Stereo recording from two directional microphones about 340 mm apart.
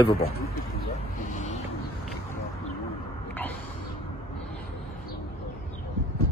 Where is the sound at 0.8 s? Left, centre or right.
Left.